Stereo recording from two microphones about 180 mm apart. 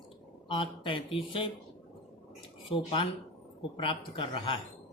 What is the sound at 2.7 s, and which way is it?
Speech, 30° left (ahead or behind).